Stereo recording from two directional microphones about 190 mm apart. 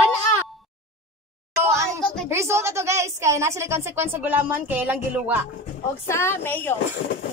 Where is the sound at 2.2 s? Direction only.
15° right (ahead or behind).